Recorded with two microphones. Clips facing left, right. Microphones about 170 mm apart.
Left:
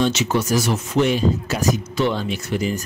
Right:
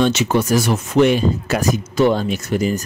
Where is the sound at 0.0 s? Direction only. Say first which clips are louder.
Right 3 dB; 55° right (ahead or behind).